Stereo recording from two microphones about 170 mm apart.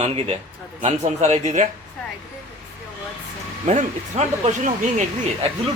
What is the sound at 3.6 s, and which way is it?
A man's voice, 40° right (ahead or behind).